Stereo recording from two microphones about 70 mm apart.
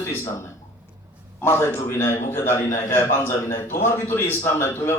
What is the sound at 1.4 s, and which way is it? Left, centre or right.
A man's voice, left.